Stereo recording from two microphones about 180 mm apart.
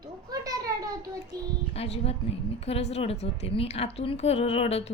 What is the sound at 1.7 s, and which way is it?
A woman's voice, 35° left (ahead or behind).